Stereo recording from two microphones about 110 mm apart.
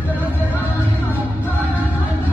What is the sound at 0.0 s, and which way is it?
Music, 15° right (ahead or behind).